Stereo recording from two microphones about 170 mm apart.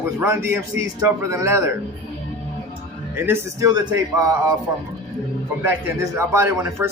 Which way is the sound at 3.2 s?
15° right (ahead or behind).